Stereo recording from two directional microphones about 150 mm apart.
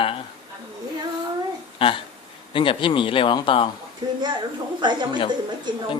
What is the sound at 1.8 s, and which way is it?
Speech, 35° left (ahead or behind).